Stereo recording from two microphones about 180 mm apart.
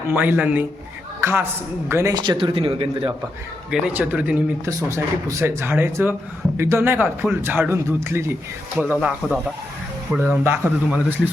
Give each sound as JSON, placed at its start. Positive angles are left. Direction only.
{"t": 0.1, "sound": "a man's voice", "side_deg": -10}
{"t": 3.7, "sound": "a man's voice", "side_deg": -5}